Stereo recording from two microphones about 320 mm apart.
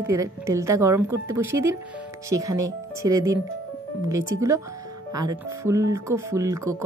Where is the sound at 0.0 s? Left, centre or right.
Centre.